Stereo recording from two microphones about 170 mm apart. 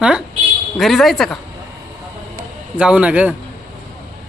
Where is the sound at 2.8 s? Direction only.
5° right (ahead or behind).